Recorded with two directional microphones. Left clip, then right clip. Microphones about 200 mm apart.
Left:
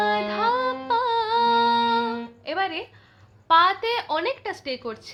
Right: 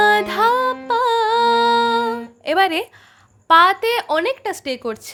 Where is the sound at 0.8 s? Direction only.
50° right (ahead or behind).